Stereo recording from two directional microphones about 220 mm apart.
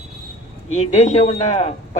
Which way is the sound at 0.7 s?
30° left (ahead or behind).